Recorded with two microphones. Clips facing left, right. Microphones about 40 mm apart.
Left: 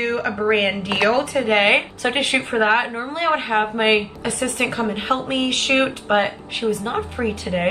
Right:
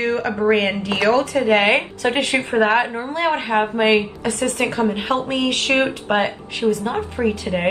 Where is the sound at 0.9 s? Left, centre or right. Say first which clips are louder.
Right 2 dB; left.